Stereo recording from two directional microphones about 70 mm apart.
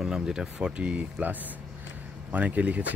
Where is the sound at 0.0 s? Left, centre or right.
Centre.